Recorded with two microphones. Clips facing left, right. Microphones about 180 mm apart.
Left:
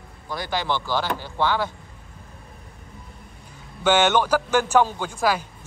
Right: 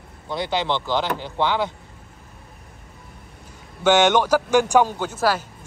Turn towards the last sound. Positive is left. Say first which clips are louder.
# right 1 dB
turn(degrees=-5)  # may be behind; listen again after turning